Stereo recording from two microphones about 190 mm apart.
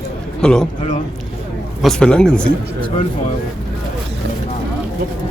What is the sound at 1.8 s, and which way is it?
Speech, 5° left (ahead or behind).